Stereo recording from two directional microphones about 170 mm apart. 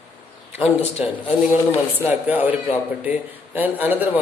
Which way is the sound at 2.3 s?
10° right (ahead or behind).